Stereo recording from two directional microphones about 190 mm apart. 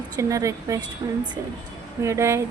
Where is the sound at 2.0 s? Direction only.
15° right (ahead or behind).